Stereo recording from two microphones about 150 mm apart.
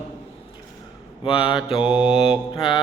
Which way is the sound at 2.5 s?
35° left (ahead or behind).